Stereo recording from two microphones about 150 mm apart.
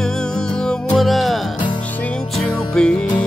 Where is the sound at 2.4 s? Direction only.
5° left (ahead or behind).